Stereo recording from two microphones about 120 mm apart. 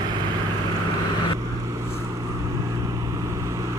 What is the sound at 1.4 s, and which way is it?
Vehicle, 25° right (ahead or behind).